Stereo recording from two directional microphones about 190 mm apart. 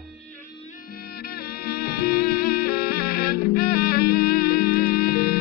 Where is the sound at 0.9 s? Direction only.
55° left (ahead or behind).